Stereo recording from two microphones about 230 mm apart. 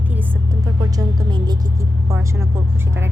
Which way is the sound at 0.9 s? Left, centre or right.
Centre.